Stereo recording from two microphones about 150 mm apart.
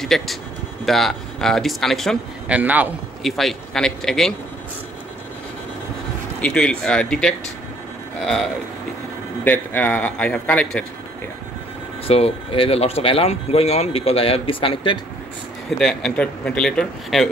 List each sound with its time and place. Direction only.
0.0 s a man's voice: centre (ahead or behind)
2.5 s a man's voice: 10° right (ahead or behind)
3.3 s a man's voice: centre (ahead or behind)
6.4 s a man's voice: 5° left (ahead or behind)
9.4 s a man's voice: 10° left (ahead or behind)
12.1 s speech: 40° left (ahead or behind)
15.8 s a man's voice: 5° left (ahead or behind)